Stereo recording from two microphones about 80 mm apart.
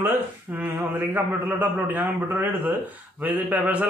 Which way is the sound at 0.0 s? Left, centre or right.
Right.